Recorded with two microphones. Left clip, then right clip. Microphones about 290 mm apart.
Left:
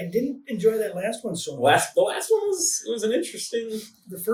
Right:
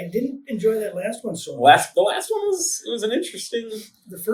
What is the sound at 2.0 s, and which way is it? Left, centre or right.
Speech, centre.